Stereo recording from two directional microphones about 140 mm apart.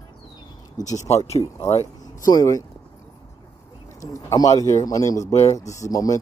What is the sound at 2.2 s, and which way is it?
Speech, 25° left (ahead or behind).